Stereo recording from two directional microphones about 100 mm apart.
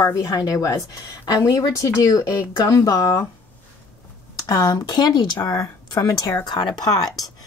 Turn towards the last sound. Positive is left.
turn(degrees=40)  # may be behind; listen again after turning